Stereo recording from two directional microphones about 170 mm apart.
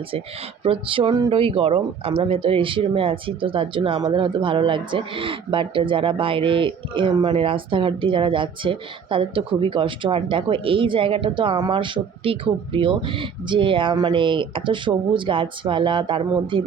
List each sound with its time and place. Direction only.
0.6 s speech: 30° right (ahead or behind)